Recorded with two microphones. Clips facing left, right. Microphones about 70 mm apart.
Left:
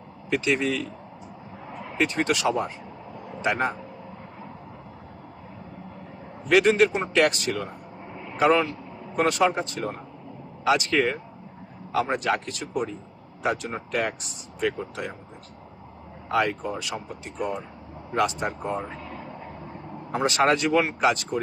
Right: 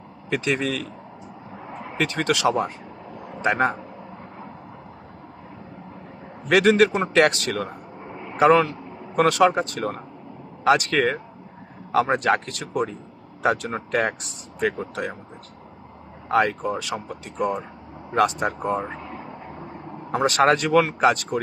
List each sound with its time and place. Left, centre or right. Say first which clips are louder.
0.3 s speech: even; right
2.0 s speech: right 4 dB; right
3.4 s speech: right 4 dB; right
6.5 s speech: right 2 dB; right
9.1 s speech: right 4 dB; right
16.3 s speech: right 4 dB; right
18.1 s speech: right 4 dB; right
19.0 s vehicle: right 2 dB; right
20.1 s speech: right 3 dB; right